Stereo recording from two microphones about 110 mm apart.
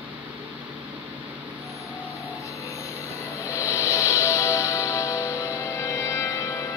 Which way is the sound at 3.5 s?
25° left (ahead or behind).